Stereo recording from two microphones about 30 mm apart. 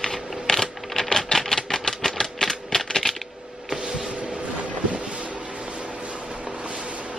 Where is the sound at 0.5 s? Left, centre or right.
Centre.